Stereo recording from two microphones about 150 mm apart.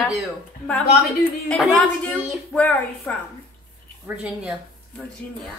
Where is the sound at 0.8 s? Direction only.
90° left.